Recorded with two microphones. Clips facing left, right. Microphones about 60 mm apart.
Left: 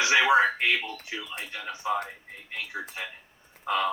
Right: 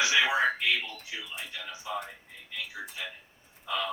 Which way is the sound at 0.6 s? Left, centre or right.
Left.